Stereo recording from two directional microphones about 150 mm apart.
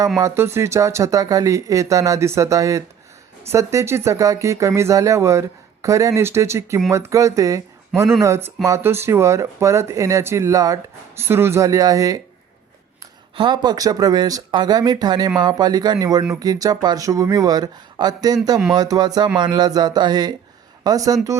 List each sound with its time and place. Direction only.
0.2 s speech: 20° right (ahead or behind)
13.3 s speech: 30° right (ahead or behind)